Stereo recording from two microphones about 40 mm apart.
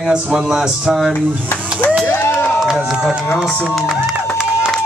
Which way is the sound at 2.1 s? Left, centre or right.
Left.